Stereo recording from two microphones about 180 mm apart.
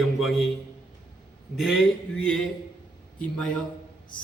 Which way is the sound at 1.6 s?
Centre (ahead or behind).